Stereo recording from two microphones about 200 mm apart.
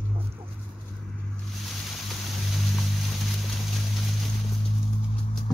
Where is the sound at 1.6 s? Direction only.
Centre (ahead or behind).